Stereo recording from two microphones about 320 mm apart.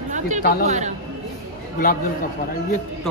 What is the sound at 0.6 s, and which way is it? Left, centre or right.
Speech, right.